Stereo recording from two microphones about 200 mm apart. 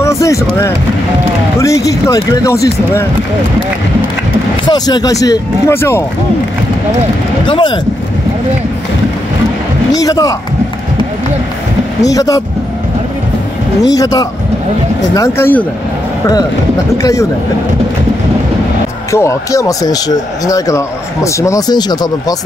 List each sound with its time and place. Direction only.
0.0 s vehicle: 15° left (ahead or behind)
1.6 s speech: 15° left (ahead or behind)
4.6 s speech: 20° left (ahead or behind)
7.4 s speech: 25° left (ahead or behind)
9.9 s speech: 20° left (ahead or behind)
12.0 s speech: 15° left (ahead or behind)
13.8 s speech: 20° left (ahead or behind)
17.0 s speech: 15° left (ahead or behind)
19.1 s speech: 15° left (ahead or behind)